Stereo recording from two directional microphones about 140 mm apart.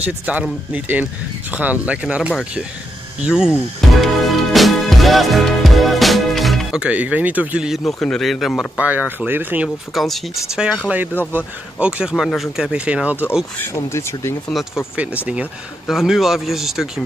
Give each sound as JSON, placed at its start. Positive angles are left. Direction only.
{"t": 0.0, "sound": "speech", "side_deg": -10}
{"t": 4.0, "sound": "music", "side_deg": 0}
{"t": 8.8, "sound": "speech", "side_deg": -10}
{"t": 9.9, "sound": "speech", "side_deg": 0}
{"t": 13.6, "sound": "speech", "side_deg": 20}
{"t": 15.9, "sound": "speech", "side_deg": 0}